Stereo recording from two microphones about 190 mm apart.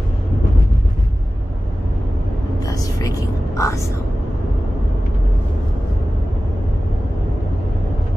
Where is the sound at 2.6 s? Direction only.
20° left (ahead or behind).